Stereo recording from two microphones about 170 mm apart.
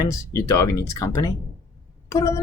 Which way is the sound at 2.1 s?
20° left (ahead or behind).